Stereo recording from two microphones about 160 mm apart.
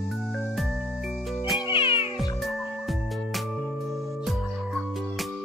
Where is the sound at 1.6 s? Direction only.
35° left (ahead or behind).